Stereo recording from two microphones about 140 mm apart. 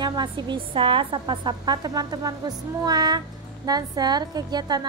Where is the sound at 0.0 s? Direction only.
30° right (ahead or behind).